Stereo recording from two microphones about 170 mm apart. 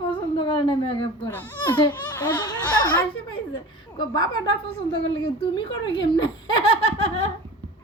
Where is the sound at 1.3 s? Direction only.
10° left (ahead or behind).